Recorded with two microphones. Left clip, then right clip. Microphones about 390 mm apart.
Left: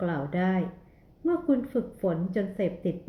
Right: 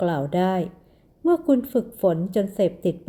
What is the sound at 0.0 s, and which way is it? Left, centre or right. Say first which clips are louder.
A woman's voice: right 7 dB; right.